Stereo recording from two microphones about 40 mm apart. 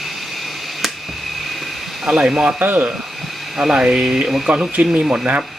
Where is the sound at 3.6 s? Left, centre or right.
Right.